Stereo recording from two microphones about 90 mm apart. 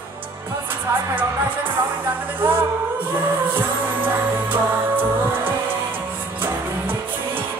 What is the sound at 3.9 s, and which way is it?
Music, 20° right (ahead or behind).